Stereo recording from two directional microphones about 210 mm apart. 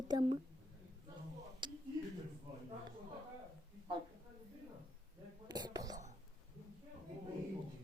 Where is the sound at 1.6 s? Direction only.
20° right (ahead or behind).